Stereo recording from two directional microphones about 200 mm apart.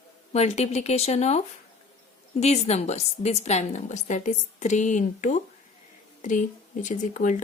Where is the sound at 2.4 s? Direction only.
35° left (ahead or behind).